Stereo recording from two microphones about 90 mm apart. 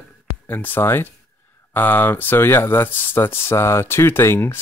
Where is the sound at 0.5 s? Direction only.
20° left (ahead or behind).